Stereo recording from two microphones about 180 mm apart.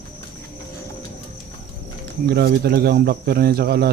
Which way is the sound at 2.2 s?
60° right (ahead or behind).